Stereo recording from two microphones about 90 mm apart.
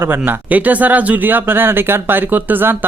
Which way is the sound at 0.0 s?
25° right (ahead or behind).